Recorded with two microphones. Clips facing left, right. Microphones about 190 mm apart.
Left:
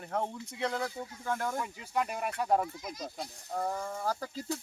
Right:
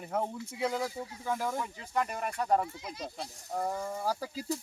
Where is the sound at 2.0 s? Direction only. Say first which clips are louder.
Even; 5° left (ahead or behind).